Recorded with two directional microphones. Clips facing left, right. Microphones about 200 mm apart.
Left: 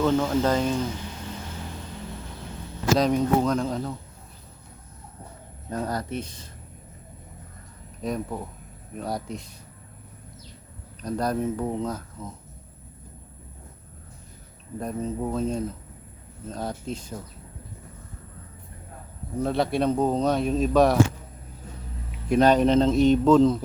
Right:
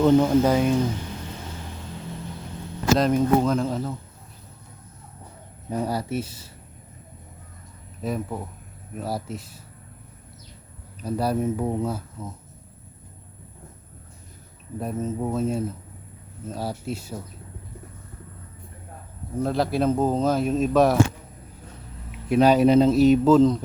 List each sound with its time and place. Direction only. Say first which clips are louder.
0.0 s speech: right 5 dB; 15° right (ahead or behind)
3.0 s speech: right 2 dB; centre (ahead or behind)
5.6 s speech: right 3 dB; 10° right (ahead or behind)
8.0 s speech: right 1 dB; 5° right (ahead or behind)
11.0 s speech: right 2 dB; 10° right (ahead or behind)
14.8 s speech: right 1 dB; 5° right (ahead or behind)
19.4 s speech: right 1 dB; centre (ahead or behind)
22.3 s speech: right 2 dB; 5° right (ahead or behind)